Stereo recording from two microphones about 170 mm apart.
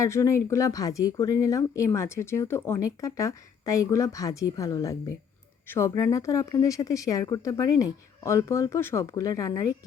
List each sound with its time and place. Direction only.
0.0 s speech: 15° left (ahead or behind)